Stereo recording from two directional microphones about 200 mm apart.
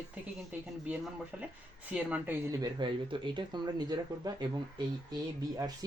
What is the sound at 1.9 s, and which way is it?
Speech, 5° right (ahead or behind).